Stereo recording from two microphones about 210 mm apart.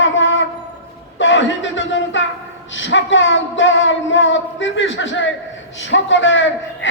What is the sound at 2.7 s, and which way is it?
A man's voice, 60° left (ahead or behind).